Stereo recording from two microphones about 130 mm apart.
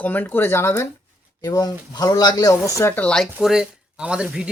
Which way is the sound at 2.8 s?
15° left (ahead or behind).